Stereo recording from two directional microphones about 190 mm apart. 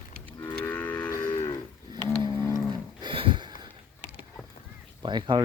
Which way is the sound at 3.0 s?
25° right (ahead or behind).